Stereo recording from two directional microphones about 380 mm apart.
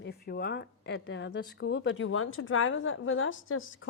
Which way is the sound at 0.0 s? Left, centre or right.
Left.